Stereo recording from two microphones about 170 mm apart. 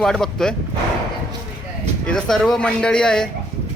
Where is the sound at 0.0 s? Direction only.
5° left (ahead or behind).